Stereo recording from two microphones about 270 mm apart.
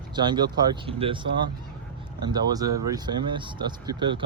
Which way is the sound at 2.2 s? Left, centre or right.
Centre.